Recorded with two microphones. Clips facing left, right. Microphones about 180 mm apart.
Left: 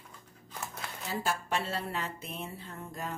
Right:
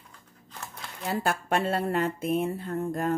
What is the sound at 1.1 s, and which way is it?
Speech, 55° right (ahead or behind).